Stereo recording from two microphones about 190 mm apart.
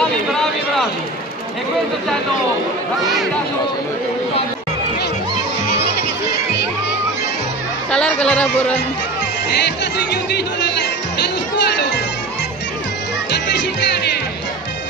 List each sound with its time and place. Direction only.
0.3 s a sound: centre (ahead or behind)
7.9 s speech: 5° left (ahead or behind)
9.7 s speech: 65° left (ahead or behind)
11.5 s music: 60° left (ahead or behind)
13.3 s music: 65° left (ahead or behind)